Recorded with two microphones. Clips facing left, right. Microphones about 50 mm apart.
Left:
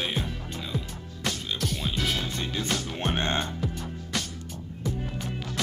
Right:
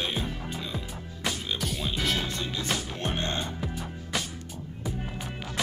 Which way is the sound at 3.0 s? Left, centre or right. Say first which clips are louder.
Left 3 dB; left.